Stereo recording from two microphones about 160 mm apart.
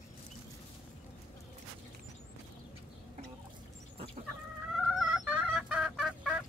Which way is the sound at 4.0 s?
35° right (ahead or behind).